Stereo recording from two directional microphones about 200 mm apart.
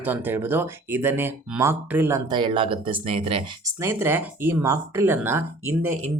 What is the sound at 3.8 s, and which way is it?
Speech, 10° right (ahead or behind).